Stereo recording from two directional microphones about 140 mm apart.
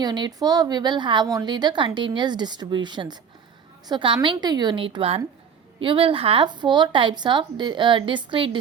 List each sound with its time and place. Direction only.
0.0 s a woman's voice: 30° right (ahead or behind)